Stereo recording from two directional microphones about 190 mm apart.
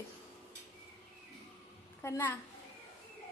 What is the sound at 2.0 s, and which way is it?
Speech, 10° left (ahead or behind).